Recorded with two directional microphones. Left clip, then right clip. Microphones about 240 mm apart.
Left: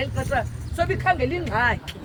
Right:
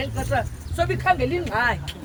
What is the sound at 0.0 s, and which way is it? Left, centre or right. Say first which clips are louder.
Speech: even; centre.